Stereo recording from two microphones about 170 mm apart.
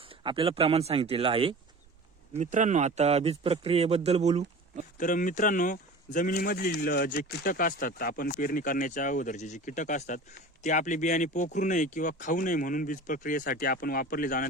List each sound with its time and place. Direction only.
0.2 s a man's voice: 30° right (ahead or behind)
2.3 s a man's voice: 45° right (ahead or behind)
4.9 s speech: 50° left (ahead or behind)
6.3 s speech: 60° left (ahead or behind)